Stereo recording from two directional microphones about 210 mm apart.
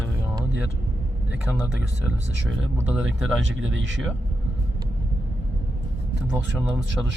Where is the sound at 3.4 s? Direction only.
65° right (ahead or behind).